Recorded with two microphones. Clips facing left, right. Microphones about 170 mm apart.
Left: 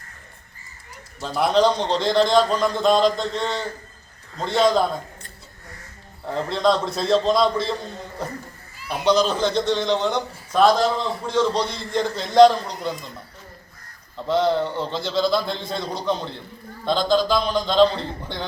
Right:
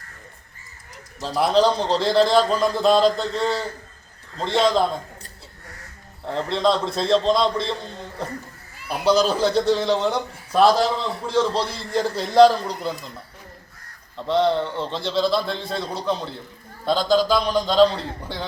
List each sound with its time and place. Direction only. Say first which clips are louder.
1.4 s a man's voice: even; centre (ahead or behind)
6.2 s a man's voice: even; centre (ahead or behind)
14.3 s a man's voice: even; centre (ahead or behind)